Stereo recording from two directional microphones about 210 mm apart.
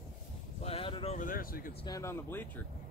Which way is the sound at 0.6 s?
25° left (ahead or behind).